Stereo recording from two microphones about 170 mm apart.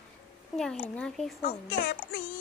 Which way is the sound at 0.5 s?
5° left (ahead or behind).